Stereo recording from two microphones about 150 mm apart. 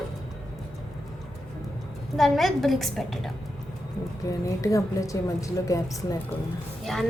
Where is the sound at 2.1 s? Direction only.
Centre (ahead or behind).